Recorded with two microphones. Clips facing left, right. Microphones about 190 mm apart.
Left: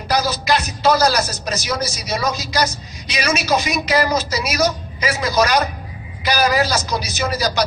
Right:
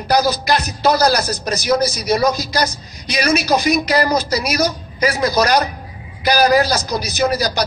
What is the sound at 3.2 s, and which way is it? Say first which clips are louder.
A man's voice: right 3 dB; 35° right (ahead or behind).